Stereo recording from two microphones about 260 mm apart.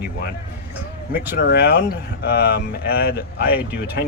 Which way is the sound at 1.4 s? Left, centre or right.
Left.